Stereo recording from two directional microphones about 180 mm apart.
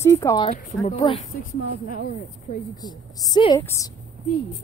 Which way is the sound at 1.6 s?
50° left (ahead or behind).